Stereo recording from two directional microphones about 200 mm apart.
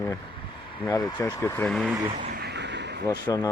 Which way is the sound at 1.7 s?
Centre (ahead or behind).